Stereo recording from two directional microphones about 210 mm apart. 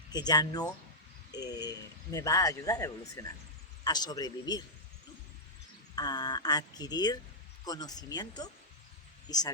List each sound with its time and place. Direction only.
0.1 s speech: 20° left (ahead or behind)
6.0 s speech: 20° left (ahead or behind)